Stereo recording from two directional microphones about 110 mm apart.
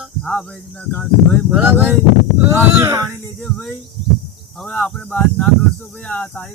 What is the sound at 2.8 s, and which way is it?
Speech, 30° right (ahead or behind).